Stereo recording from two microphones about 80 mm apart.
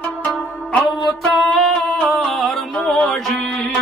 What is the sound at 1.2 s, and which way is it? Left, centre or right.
Music, centre.